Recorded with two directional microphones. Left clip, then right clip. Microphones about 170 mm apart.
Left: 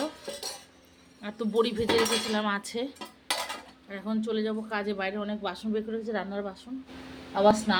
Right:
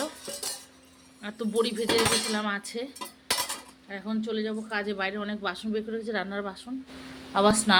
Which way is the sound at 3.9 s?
15° left (ahead or behind).